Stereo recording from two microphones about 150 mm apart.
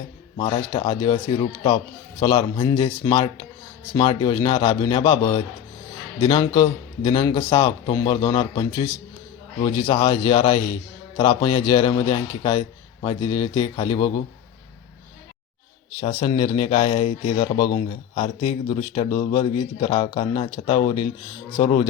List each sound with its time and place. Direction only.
0.3 s a man's voice: 35° left (ahead or behind)
16.0 s speech: 40° left (ahead or behind)